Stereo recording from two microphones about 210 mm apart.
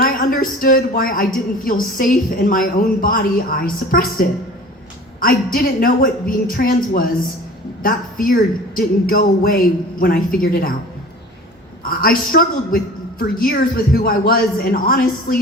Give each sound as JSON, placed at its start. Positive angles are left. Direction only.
{"t": 0.0, "sound": "a woman's voice", "side_deg": 40}
{"t": 11.8, "sound": "a man's voice", "side_deg": 45}